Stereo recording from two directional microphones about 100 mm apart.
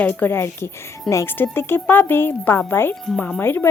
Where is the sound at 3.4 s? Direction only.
25° left (ahead or behind).